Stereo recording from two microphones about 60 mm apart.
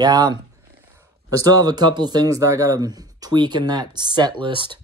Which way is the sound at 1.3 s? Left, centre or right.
Right.